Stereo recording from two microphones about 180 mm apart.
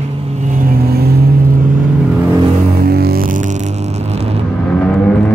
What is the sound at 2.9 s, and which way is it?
Music, 60° right (ahead or behind).